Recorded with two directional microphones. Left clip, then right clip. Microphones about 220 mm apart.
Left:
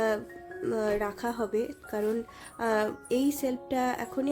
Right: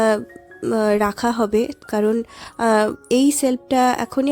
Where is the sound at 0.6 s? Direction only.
35° right (ahead or behind).